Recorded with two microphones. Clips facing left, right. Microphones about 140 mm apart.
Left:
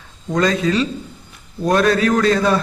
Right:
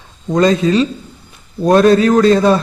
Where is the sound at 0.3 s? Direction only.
25° right (ahead or behind).